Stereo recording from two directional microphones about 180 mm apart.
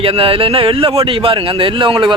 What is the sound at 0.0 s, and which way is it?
Speech, 30° right (ahead or behind).